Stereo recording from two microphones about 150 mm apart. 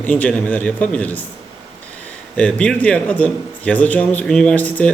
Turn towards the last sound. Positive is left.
turn(degrees=10)  # may be behind; listen again after turning